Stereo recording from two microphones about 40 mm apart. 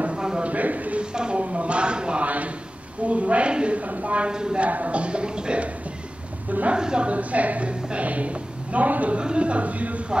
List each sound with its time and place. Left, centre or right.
0.1 s a sound: right
0.5 s a sound: right
1.1 s a man's voice: right
2.2 s a sound: right
3.1 s a woman's voice: right
4.3 s a man's voice: centre
4.6 s a woman's voice: right
6.7 s a man's voice: right
7.1 s a woman's voice: right
9.2 s a woman's voice: right